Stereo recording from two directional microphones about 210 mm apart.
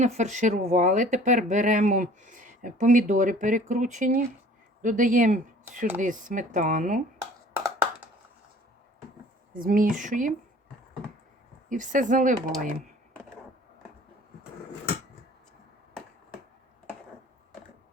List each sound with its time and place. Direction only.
0.0 s speech: 35° right (ahead or behind)
7.5 s a sound: 10° right (ahead or behind)
9.5 s speech: 40° right (ahead or behind)
11.7 s speech: 40° right (ahead or behind)